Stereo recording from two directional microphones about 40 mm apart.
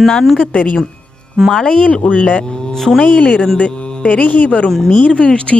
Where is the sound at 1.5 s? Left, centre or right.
Centre.